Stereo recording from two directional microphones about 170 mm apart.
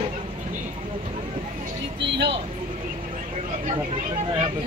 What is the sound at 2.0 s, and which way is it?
Vehicle, 85° right.